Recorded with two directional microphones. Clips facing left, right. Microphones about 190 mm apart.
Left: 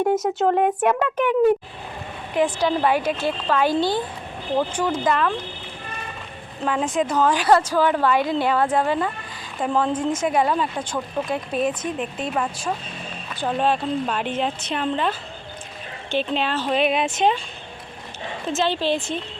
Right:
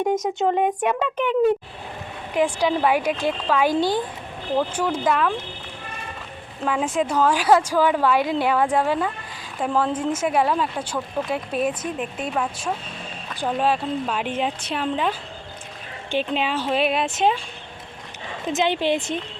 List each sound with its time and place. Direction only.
0.1 s speech: 5° left (ahead or behind)
2.3 s speech: 10° right (ahead or behind)
6.7 s speech: 5° right (ahead or behind)
16.1 s speech: 10° right (ahead or behind)
18.4 s speech: 15° right (ahead or behind)